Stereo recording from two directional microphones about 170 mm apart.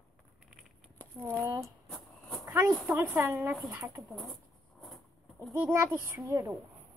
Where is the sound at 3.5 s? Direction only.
Centre (ahead or behind).